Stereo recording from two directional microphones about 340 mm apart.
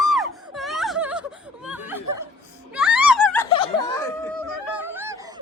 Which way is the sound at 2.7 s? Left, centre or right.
Centre.